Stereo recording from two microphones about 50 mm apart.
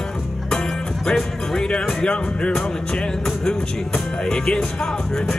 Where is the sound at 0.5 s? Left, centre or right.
Centre.